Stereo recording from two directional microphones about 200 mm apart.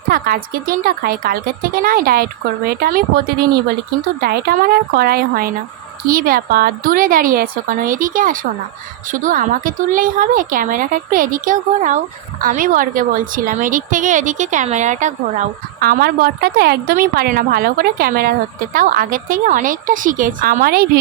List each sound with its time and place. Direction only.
0.1 s a woman's voice: 45° right (ahead or behind)
4.2 s a woman's voice: 50° right (ahead or behind)